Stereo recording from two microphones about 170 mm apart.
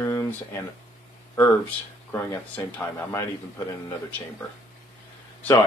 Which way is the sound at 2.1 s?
15° left (ahead or behind).